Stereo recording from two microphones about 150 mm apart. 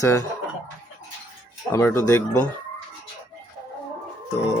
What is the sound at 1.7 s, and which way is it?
Speech, 15° left (ahead or behind).